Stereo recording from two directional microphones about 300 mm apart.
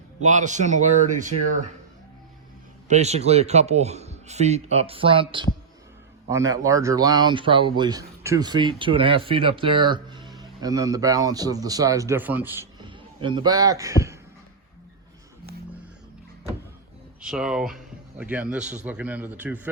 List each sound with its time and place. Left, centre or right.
0.2 s a man's voice: right
2.9 s a man's voice: right
17.2 s speech: centre